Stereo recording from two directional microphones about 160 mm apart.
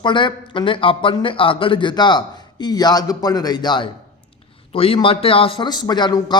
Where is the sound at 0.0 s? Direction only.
30° left (ahead or behind).